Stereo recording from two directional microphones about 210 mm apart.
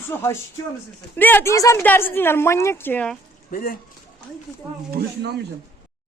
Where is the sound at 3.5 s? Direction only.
45° left (ahead or behind).